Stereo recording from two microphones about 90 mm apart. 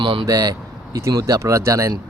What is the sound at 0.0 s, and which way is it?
Speech, 75° right (ahead or behind).